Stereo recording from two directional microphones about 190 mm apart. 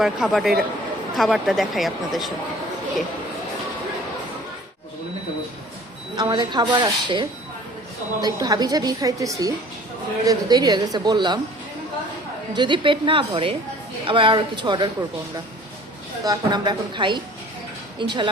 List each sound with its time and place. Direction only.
0.0 s speech: centre (ahead or behind)
6.1 s a woman's voice: 25° right (ahead or behind)
12.5 s a woman's voice: 25° right (ahead or behind)
16.2 s a woman's voice: 20° right (ahead or behind)